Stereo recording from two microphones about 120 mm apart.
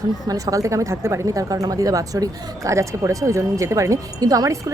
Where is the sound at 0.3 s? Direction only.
30° right (ahead or behind).